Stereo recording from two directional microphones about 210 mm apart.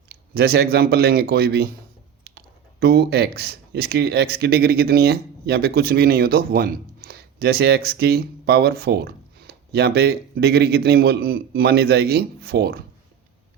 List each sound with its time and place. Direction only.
0.1 s speech: 50° right (ahead or behind)
2.8 s speech: 50° right (ahead or behind)